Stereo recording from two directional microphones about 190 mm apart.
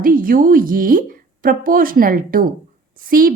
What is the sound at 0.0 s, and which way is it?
A woman's voice, 45° right (ahead or behind).